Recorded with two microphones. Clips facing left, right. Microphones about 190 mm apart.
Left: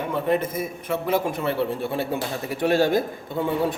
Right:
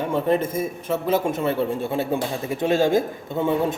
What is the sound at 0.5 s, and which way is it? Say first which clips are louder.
Speech: right 3 dB; 25° right (ahead or behind).